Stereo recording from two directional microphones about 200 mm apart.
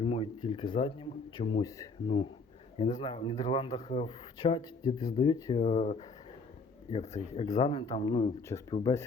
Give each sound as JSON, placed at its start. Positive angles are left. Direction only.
{"t": 0.0, "sound": "speech", "side_deg": 25}
{"t": 7.2, "sound": "speech", "side_deg": 35}